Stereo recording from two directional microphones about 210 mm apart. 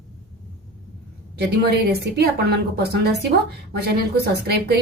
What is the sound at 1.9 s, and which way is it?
A woman's voice, 50° right (ahead or behind).